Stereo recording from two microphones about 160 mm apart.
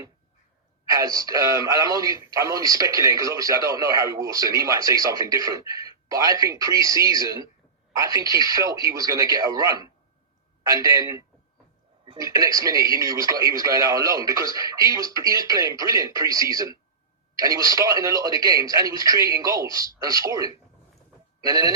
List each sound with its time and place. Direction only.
0.9 s a man's voice: 20° right (ahead or behind)